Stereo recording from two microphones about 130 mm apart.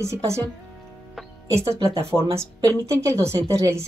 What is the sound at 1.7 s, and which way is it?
A woman's voice, 20° right (ahead or behind).